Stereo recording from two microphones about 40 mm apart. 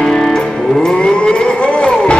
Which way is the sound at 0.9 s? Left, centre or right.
Left.